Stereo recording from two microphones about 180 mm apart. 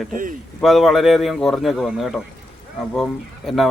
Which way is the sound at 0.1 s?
45° right (ahead or behind).